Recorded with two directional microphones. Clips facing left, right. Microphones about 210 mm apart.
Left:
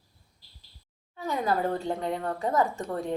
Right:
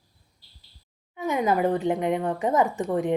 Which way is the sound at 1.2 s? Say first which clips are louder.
Right 5 dB; 20° right (ahead or behind).